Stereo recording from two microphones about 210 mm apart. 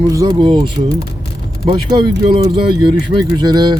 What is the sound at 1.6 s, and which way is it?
Speech, 25° right (ahead or behind).